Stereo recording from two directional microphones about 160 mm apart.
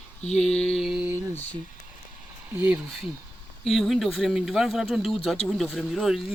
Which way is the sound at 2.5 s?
10° right (ahead or behind).